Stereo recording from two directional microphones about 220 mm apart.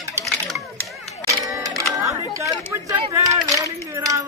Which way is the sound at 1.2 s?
15° right (ahead or behind).